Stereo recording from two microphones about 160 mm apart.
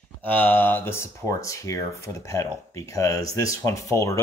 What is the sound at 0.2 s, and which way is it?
Speech, 10° left (ahead or behind).